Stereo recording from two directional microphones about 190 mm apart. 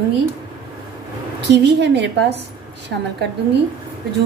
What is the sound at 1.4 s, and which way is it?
Speech, 65° right (ahead or behind).